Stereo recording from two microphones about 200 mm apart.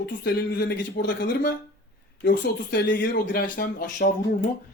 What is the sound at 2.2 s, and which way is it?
Speech, 50° left (ahead or behind).